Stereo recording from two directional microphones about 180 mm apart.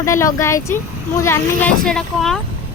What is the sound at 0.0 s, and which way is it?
Speech, 15° left (ahead or behind).